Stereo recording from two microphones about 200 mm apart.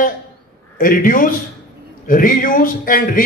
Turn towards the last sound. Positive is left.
turn(degrees=45)  # may be behind; listen again after turning